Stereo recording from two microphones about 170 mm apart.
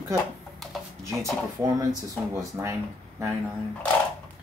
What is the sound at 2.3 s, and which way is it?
Speech, 15° right (ahead or behind).